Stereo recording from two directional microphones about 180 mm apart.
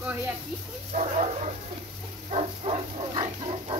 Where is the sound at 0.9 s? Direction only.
40° right (ahead or behind).